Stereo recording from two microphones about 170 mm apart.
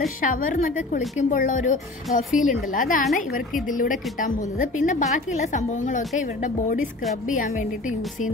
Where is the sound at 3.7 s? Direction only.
50° left (ahead or behind).